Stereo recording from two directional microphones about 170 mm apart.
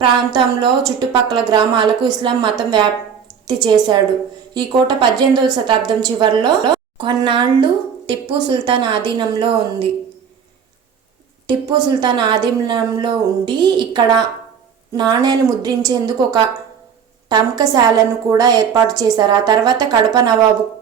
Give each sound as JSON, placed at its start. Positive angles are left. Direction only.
{"t": 0.0, "sound": "a woman's voice", "side_deg": -25}
{"t": 11.9, "sound": "a woman's voice", "side_deg": -25}